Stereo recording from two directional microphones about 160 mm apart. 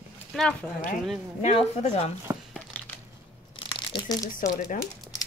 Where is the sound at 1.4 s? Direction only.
40° left (ahead or behind).